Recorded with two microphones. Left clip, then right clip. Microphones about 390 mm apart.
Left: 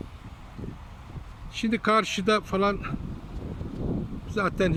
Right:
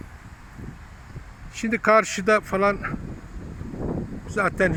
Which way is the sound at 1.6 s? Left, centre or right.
Centre.